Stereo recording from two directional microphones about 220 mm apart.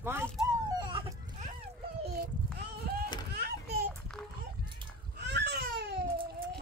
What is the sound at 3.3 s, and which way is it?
Children playing, 45° right (ahead or behind).